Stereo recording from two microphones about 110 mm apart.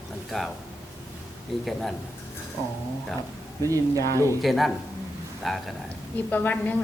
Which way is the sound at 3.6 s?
30° right (ahead or behind).